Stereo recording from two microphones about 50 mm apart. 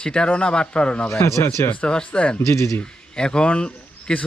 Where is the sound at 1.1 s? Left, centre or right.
Left.